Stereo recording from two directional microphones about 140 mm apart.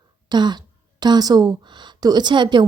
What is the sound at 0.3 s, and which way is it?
A woman's voice, 30° right (ahead or behind).